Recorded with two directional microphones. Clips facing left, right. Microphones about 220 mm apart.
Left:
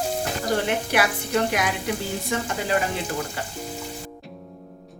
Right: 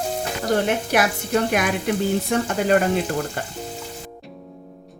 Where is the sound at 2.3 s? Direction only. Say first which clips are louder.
Right 4 dB; 55° right (ahead or behind).